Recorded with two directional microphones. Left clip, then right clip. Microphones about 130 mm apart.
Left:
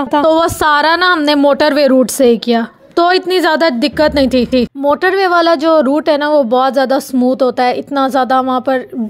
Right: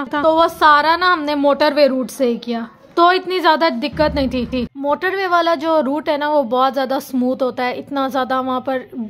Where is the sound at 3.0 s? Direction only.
45° left (ahead or behind).